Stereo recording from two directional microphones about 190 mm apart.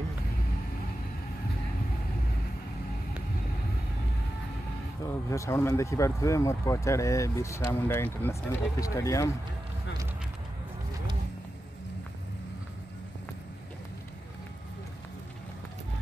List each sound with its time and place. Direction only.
5.0 s speech: 15° left (ahead or behind)